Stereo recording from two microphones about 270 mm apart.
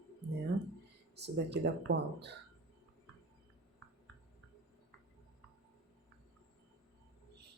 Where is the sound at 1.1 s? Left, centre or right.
Right.